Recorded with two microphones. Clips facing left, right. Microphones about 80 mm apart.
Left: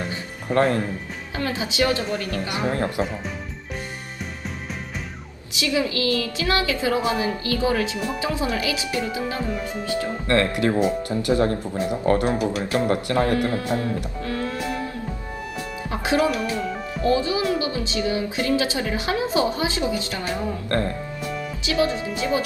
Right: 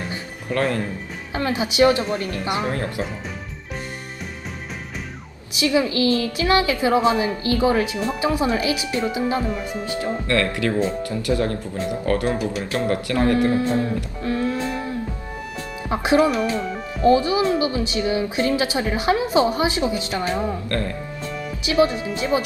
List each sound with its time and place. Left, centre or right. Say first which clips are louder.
0.1 s music: left 2 dB; left
1.4 s a woman's voice: right 5 dB; right
2.7 s speech: left 2 dB; left
5.5 s a woman's voice: right 4 dB; right
10.2 s speech: left 2 dB; left
13.4 s a woman's voice: right 4 dB; right
15.9 s a woman's voice: right 4 dB; right
20.7 s speech: left 2 dB; left
21.7 s a woman's voice: right 4 dB; right